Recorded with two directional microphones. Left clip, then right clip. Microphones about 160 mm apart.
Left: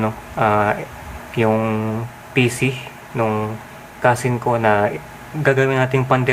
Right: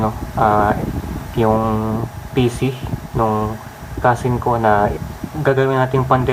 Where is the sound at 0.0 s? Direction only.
15° left (ahead or behind).